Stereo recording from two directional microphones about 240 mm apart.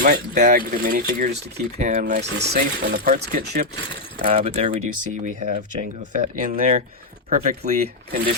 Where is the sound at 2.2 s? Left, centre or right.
Right.